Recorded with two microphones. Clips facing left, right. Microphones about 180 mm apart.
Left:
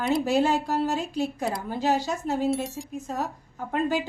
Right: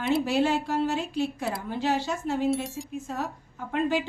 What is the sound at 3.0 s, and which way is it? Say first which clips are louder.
Speech: left 2 dB; 40° left (ahead or behind).